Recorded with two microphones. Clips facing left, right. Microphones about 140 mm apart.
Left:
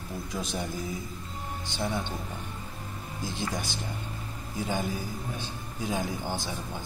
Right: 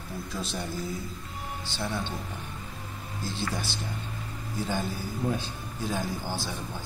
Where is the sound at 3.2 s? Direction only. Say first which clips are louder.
Even; 15° left (ahead or behind).